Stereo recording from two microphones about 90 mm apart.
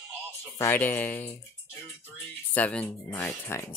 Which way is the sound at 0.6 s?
25° left (ahead or behind).